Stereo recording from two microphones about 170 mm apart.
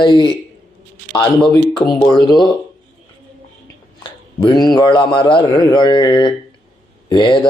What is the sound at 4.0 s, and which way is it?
A man's voice, 25° left (ahead or behind).